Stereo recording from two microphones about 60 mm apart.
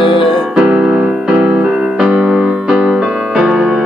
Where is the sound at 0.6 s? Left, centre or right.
Centre.